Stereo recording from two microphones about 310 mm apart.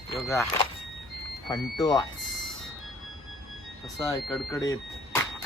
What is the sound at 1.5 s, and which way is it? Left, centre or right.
Speech, centre.